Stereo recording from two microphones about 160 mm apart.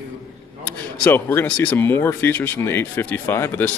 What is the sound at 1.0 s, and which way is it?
Speech, 10° left (ahead or behind).